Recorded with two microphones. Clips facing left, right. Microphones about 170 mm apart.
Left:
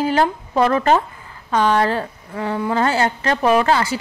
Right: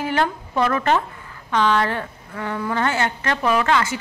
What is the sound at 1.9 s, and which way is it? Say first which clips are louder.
Speech: left 5 dB; 30° left (ahead or behind).